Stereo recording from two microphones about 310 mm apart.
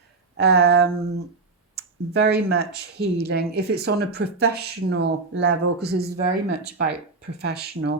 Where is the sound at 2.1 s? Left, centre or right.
Right.